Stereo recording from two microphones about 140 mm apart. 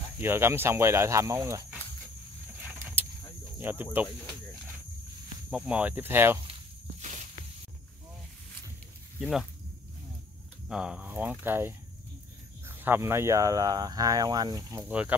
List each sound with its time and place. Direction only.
0.2 s speech: 15° right (ahead or behind)
2.8 s vehicle: 15° right (ahead or behind)
3.5 s speech: 15° right (ahead or behind)
5.5 s speech: 5° right (ahead or behind)
7.0 s snake: 55° right (ahead or behind)
9.2 s speech: 5° right (ahead or behind)
10.7 s speech: 5° right (ahead or behind); by 14.9 s 25° right (ahead or behind)
14.9 s speech: 10° right (ahead or behind)